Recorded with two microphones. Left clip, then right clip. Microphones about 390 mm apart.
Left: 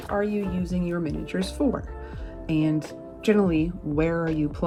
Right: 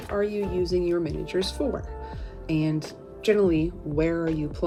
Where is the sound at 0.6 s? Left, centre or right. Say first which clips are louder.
Right 5 dB; centre.